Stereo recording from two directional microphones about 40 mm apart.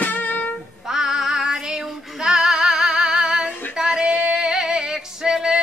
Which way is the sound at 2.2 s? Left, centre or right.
Centre.